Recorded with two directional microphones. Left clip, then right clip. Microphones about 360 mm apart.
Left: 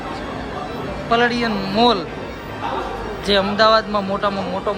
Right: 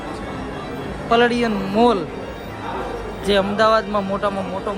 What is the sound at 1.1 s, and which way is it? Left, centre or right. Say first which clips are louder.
Speech: right 1 dB; centre.